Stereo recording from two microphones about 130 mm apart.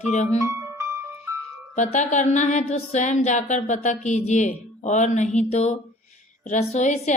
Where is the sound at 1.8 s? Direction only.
65° left (ahead or behind).